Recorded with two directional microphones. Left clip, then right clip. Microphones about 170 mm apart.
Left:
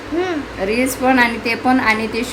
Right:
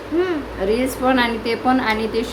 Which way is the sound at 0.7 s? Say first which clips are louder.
Left 3 dB; 15° left (ahead or behind).